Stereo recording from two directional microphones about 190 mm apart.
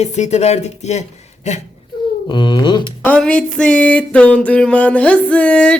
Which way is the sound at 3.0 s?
5° left (ahead or behind).